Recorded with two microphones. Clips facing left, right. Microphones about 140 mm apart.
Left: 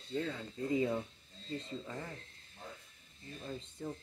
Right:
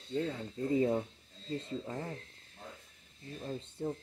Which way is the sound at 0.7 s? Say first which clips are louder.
Right 3 dB; 35° right (ahead or behind).